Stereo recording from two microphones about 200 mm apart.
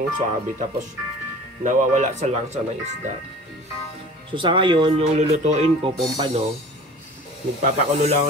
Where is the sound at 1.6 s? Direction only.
40° right (ahead or behind).